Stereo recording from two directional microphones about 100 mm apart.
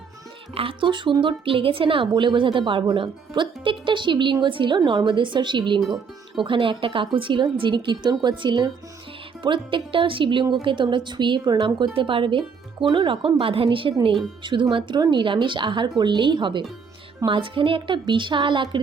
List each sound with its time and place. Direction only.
0.5 s a woman's voice: 65° right (ahead or behind); by 11.9 s 45° right (ahead or behind)
11.9 s a woman's voice: 60° right (ahead or behind)